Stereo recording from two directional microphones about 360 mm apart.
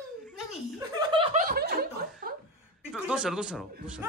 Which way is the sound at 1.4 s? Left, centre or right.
Right.